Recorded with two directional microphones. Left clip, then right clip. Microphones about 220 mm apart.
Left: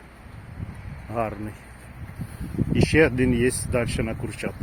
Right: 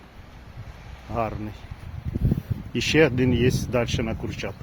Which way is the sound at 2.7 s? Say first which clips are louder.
Even; 10° right (ahead or behind).